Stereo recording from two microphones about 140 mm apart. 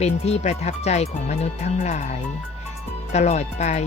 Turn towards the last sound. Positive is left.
turn(degrees=50)  # may be behind; listen again after turning